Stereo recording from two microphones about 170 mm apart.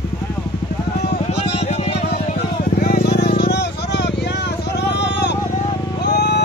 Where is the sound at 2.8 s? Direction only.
60° left (ahead or behind); by 4.1 s 80° left.